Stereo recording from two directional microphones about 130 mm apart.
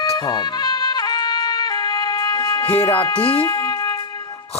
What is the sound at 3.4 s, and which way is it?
Music, 30° left (ahead or behind).